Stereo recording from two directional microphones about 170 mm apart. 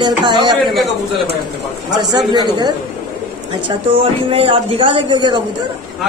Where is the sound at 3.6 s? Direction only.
35° right (ahead or behind).